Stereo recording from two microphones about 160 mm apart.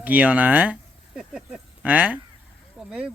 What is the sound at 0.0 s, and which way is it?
Speech, 10° right (ahead or behind).